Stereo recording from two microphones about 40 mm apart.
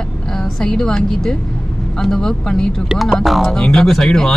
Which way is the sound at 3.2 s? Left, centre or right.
Centre.